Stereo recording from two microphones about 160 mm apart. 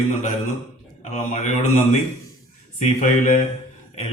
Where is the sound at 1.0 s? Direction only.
45° left (ahead or behind).